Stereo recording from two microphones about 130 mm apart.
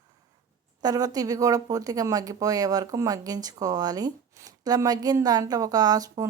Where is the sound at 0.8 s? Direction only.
30° right (ahead or behind).